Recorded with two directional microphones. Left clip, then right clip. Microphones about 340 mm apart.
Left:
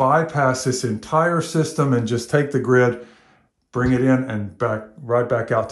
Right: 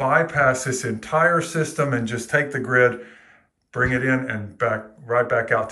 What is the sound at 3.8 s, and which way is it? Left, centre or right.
Speech, centre.